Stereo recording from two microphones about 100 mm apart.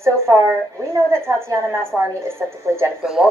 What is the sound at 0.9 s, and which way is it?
A woman's voice, 30° right (ahead or behind).